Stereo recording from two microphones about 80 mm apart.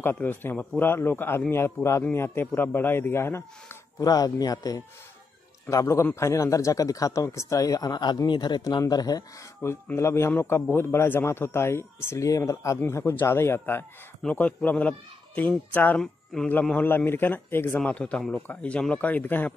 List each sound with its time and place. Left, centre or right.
0.0 s a man's voice: left
4.0 s speech: left
5.7 s a man's voice: left
9.9 s a man's voice: left
12.8 s speech: left
16.0 s speech: centre
16.7 s speech: left
17.7 s speech: centre